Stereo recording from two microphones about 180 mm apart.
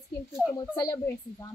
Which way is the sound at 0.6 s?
20° left (ahead or behind).